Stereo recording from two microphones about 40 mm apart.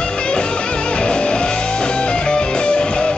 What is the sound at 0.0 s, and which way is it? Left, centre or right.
Music, left.